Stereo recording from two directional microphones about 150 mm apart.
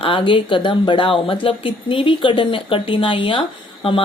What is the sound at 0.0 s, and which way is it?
A woman's voice, 35° left (ahead or behind).